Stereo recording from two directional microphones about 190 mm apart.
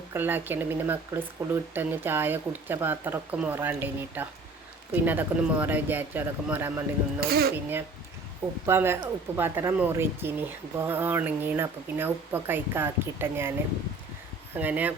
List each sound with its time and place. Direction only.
0.1 s speech: 10° right (ahead or behind)
7.2 s speech: 55° right (ahead or behind)
7.5 s speech: 10° right (ahead or behind)
14.5 s speech: 10° right (ahead or behind)